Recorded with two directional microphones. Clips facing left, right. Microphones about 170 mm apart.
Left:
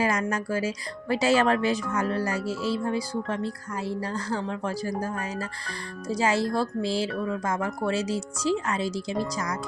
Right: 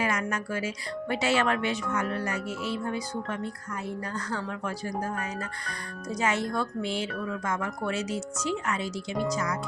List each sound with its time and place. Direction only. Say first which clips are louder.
0.0 s speech: left 3 dB; 35° left (ahead or behind)